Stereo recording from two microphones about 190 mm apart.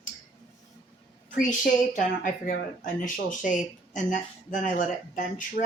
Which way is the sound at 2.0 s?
45° left (ahead or behind).